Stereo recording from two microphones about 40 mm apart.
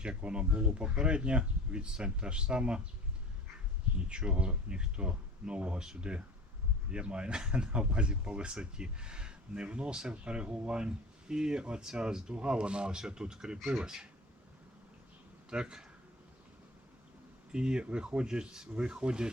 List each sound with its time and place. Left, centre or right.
0.2 s speech: right
4.1 s speech: right
13.6 s speech: centre
13.8 s speech: centre
15.4 s speech: right
17.5 s speech: right